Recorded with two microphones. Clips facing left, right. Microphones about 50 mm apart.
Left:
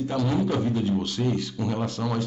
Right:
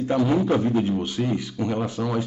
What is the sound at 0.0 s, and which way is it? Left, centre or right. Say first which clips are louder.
Speech: right 4 dB; right.